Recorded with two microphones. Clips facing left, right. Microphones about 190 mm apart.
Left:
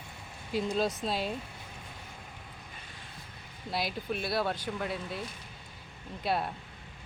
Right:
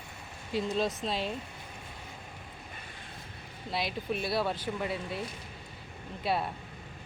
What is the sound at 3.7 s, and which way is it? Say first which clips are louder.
Speech: even; 5° left (ahead or behind).